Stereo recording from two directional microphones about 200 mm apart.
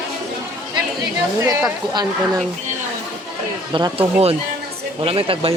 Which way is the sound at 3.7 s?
25° right (ahead or behind).